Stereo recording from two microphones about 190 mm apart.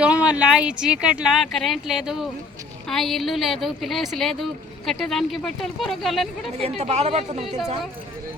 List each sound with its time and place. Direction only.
0.0 s speech: 5° right (ahead or behind)
6.6 s speech: 35° right (ahead or behind)